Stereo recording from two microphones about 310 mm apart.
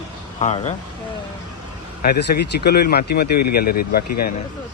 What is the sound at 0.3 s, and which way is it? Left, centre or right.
Speech, left.